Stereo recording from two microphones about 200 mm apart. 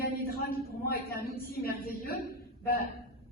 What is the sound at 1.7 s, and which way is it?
Speech, 45° left (ahead or behind).